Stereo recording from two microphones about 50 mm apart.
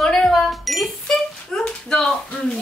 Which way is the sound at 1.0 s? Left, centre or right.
Centre.